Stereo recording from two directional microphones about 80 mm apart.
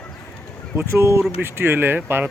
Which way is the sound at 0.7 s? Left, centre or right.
Right.